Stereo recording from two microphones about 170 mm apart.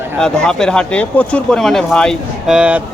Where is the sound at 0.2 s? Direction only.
5° left (ahead or behind).